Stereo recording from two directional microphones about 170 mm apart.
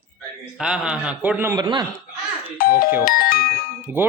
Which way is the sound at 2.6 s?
60° left (ahead or behind).